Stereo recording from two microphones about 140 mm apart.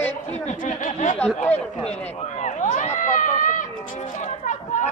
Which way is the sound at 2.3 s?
60° left (ahead or behind).